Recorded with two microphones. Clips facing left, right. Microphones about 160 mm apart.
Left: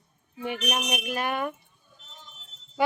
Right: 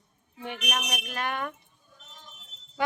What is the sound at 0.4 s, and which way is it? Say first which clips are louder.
Speech: left 4 dB; 5° left (ahead or behind).